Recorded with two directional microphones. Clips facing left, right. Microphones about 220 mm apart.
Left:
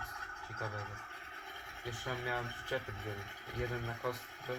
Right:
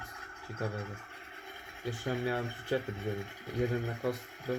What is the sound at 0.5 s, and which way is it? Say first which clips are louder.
Speech: right 7 dB; 25° right (ahead or behind).